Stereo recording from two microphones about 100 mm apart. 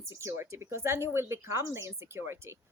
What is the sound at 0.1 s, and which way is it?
A woman's voice, 30° right (ahead or behind).